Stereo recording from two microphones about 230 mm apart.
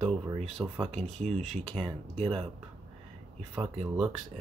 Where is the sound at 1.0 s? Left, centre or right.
Right.